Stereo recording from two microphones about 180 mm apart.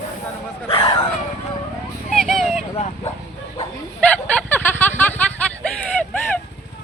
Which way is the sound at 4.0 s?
5° left (ahead or behind).